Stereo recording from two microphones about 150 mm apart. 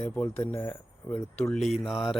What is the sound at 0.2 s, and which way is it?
Speech, 15° left (ahead or behind).